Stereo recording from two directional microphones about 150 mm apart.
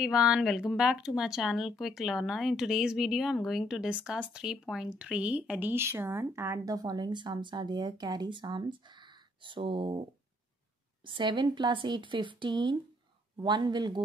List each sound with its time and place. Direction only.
0.0 s speech: 5° right (ahead or behind); by 10.0 s 35° right (ahead or behind)
11.1 s speech: 30° right (ahead or behind)